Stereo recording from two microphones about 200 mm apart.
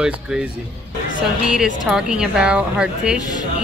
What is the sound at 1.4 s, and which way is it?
A woman's voice, 5° right (ahead or behind).